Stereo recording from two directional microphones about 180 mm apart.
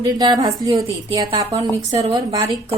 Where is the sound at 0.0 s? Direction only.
20° right (ahead or behind).